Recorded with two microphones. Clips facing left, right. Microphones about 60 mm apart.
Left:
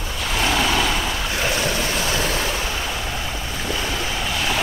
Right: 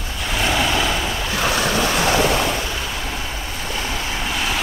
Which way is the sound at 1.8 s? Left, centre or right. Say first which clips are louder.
Right 5 dB; right.